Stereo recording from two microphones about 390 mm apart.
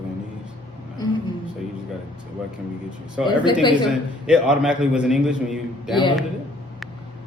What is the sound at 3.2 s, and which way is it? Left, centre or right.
A man's voice, centre.